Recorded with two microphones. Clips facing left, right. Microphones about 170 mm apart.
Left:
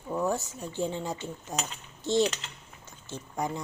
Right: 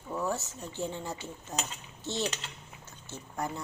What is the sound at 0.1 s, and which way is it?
Speech, 15° left (ahead or behind).